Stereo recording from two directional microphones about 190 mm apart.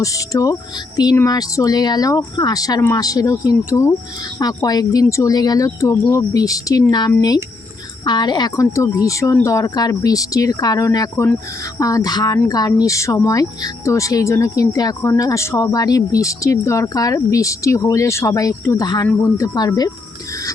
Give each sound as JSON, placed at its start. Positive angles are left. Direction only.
{"t": 0.0, "sound": "speech", "side_deg": 15}